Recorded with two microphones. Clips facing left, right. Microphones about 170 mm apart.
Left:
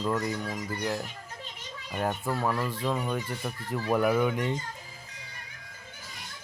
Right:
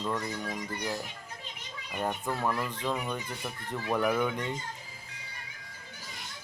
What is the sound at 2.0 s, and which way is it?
Speech, centre (ahead or behind).